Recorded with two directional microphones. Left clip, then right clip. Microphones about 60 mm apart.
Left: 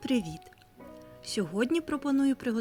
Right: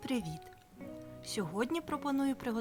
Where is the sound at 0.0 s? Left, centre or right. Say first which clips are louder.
Left 7 dB; left.